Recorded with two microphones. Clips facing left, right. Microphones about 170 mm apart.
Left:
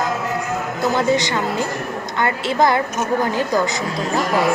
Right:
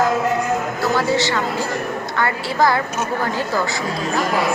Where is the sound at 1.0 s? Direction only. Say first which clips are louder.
Left 2 dB; 20° left (ahead or behind).